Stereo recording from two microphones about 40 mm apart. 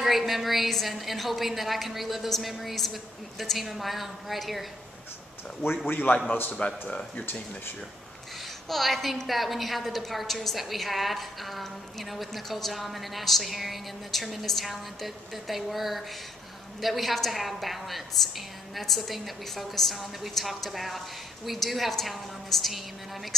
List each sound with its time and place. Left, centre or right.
0.0 s a woman's voice: centre
5.9 s a man's voice: left
6.5 s speech: left
8.6 s a woman's voice: centre